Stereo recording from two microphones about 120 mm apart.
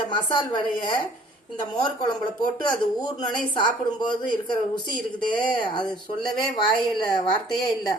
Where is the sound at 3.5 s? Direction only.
40° left (ahead or behind).